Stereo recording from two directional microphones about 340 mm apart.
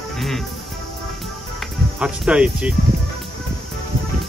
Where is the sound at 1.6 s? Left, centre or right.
Centre.